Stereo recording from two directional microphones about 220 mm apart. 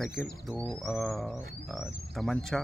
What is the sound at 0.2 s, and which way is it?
Speech, centre (ahead or behind).